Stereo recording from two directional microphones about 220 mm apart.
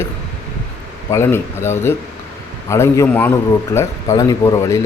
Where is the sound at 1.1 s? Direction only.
10° left (ahead or behind).